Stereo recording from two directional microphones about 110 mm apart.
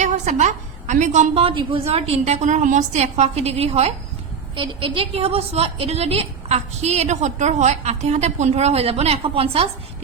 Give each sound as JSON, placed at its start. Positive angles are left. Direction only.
{"t": 0.0, "sound": "a woman's voice", "side_deg": -90}
{"t": 1.8, "sound": "a woman's voice", "side_deg": -70}
{"t": 4.5, "sound": "a woman's voice", "side_deg": -50}